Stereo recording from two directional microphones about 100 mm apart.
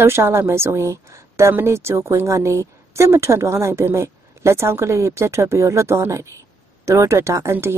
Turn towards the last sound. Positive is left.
turn(degrees=-25)  # may be behind; listen again after turning